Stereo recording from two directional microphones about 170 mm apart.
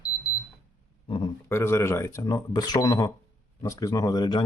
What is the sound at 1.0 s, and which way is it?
Speech, 30° left (ahead or behind).